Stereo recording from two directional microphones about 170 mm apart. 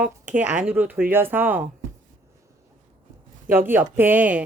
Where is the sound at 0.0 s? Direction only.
10° right (ahead or behind).